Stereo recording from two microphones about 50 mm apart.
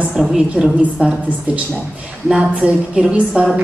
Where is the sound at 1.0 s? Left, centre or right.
Right.